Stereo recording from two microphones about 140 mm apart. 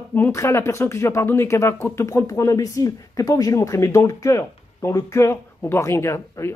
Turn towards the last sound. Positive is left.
turn(degrees=20)  # may be behind; listen again after turning